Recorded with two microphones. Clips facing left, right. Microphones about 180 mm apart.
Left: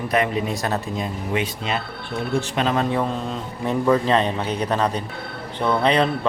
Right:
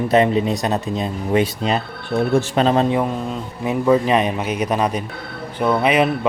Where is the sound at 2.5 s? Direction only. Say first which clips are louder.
Right 5 dB; 30° right (ahead or behind).